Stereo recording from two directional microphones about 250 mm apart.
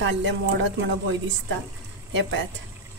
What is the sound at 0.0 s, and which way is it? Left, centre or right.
Speech, right.